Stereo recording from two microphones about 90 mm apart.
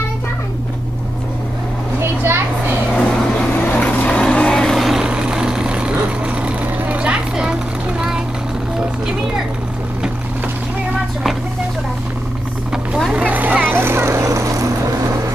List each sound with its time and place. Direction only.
2.0 s children playing: 25° right (ahead or behind)
3.0 s vehicle: 10° left (ahead or behind); by 8.2 s 10° right (ahead or behind)
12.7 s vehicle: 5° right (ahead or behind); by 14.7 s 35° right (ahead or behind)